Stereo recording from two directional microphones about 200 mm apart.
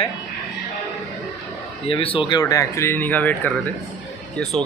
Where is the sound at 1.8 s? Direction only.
25° left (ahead or behind); by 4.6 s centre (ahead or behind).